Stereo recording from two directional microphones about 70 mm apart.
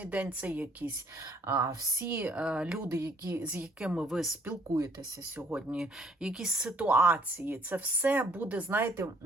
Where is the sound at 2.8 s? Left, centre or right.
Right.